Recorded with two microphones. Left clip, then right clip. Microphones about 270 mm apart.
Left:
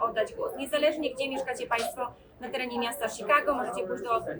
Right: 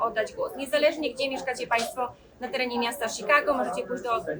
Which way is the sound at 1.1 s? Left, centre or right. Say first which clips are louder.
Right 3 dB; right.